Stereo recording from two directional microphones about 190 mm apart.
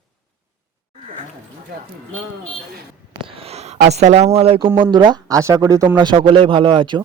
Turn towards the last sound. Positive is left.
turn(degrees=-25)  # may be behind; listen again after turning